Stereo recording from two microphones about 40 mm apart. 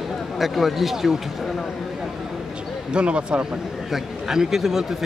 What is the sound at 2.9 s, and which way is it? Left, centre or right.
Speech, right.